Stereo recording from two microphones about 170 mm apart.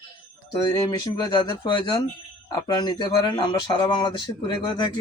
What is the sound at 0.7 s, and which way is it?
Speech, 25° left (ahead or behind).